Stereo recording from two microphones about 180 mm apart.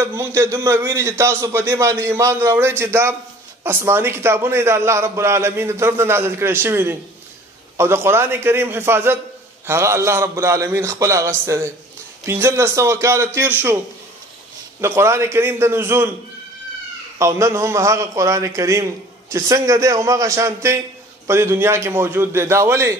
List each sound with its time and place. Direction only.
0.0 s a man's voice: 15° right (ahead or behind)
14.8 s a man's voice: 15° right (ahead or behind)
17.2 s a man's voice: 15° right (ahead or behind)